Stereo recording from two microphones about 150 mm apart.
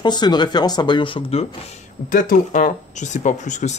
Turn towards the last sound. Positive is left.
turn(degrees=55)  # may be behind; listen again after turning